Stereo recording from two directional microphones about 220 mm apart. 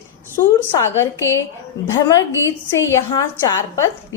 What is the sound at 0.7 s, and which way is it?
A woman's voice, 15° left (ahead or behind).